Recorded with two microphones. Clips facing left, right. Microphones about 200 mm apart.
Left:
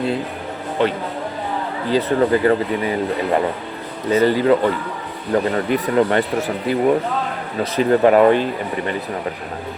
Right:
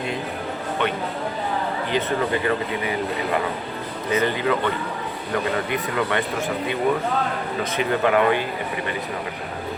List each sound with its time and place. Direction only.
0.8 s speech: 30° left (ahead or behind)
4.1 s speech: 35° left (ahead or behind)